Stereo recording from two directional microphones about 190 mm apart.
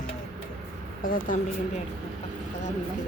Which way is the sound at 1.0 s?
45° left (ahead or behind).